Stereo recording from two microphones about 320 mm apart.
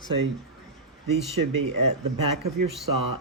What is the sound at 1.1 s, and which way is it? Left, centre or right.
Speech, right.